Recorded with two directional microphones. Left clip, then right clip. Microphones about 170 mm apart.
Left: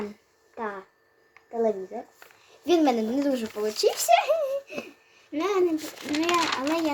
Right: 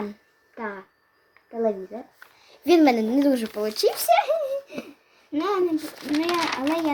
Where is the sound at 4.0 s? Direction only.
20° right (ahead or behind).